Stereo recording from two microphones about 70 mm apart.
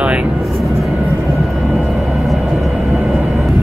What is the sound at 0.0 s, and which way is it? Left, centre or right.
Vehicle, centre.